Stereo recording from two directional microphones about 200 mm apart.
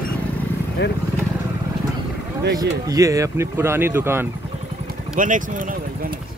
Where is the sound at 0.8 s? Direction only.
60° left (ahead or behind).